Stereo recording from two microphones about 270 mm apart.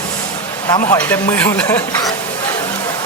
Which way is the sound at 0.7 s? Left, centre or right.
Centre.